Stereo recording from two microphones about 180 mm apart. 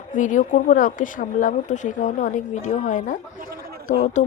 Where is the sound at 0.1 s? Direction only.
45° left (ahead or behind).